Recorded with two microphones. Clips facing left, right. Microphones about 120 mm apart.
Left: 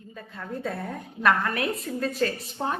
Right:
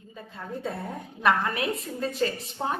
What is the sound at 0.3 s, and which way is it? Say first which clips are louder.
A woman's voice: left 1 dB; 25° right (ahead or behind).